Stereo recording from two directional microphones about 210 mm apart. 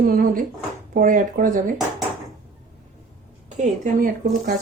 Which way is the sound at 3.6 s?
40° right (ahead or behind).